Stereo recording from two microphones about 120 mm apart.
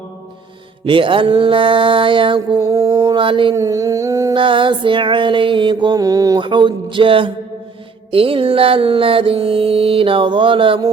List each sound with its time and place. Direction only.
0.9 s mantra: 45° right (ahead or behind)
3.5 s humming: 25° right (ahead or behind)
4.4 s mantra: 45° right (ahead or behind)